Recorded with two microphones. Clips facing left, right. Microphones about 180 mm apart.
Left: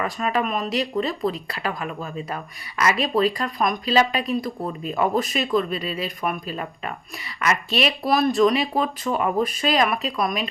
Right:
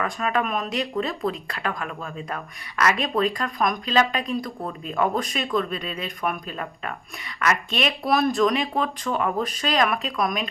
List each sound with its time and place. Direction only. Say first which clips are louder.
0.0 s speech: left 1 dB; 5° left (ahead or behind)